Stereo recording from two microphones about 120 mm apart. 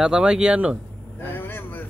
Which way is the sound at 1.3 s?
15° left (ahead or behind).